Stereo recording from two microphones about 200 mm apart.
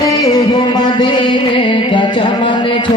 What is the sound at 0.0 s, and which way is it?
Music, 20° left (ahead or behind).